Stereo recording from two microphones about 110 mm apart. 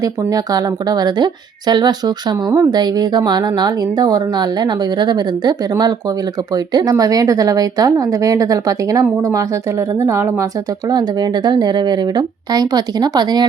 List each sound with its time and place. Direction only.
0.0 s a woman's voice: 35° right (ahead or behind)
10.8 s speech: 40° right (ahead or behind)